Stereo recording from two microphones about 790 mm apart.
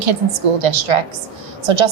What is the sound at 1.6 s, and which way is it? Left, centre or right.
Speech, right.